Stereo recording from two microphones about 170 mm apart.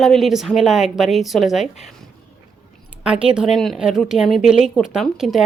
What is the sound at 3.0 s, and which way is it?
A woman's voice, 5° right (ahead or behind).